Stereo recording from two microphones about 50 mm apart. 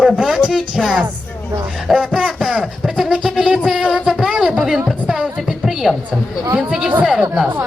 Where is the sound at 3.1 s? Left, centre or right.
Centre.